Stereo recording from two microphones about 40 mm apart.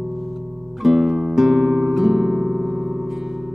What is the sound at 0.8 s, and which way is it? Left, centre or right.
Music, centre.